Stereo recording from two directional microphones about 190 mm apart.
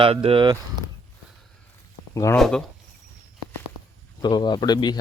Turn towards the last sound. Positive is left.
turn(degrees=20)  # may be behind; listen again after turning